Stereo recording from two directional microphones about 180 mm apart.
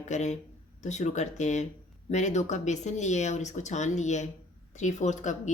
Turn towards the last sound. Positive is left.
turn(degrees=40)  # may be behind; listen again after turning